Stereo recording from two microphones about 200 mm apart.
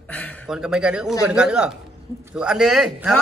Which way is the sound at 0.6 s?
5° right (ahead or behind).